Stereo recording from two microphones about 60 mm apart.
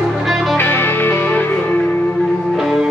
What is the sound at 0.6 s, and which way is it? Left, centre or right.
Music, left.